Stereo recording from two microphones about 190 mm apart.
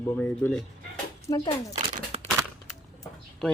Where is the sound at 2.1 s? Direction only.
35° right (ahead or behind).